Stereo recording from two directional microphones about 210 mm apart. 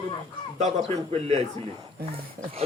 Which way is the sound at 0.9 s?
30° right (ahead or behind).